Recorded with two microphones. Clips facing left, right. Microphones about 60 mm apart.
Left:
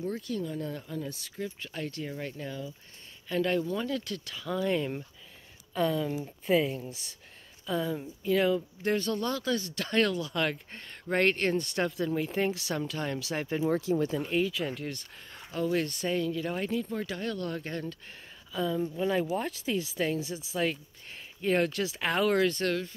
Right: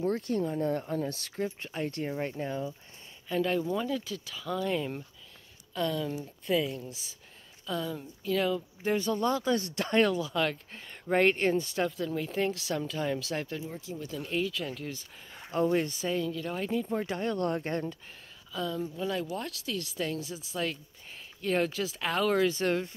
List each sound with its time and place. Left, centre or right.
0.0 s speech: right
1.7 s speech: right
3.3 s speech: centre
8.8 s speech: centre
10.3 s speech: centre
11.1 s speech: centre
13.7 s speech: left
14.2 s speech: centre
15.7 s speech: centre
16.0 s speech: centre
16.9 s speech: right
18.5 s speech: centre
18.9 s speech: left; by 22.7 s centre
22.7 s speech: right